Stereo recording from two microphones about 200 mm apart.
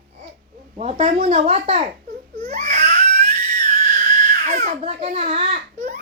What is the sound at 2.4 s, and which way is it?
Crying, 35° right (ahead or behind).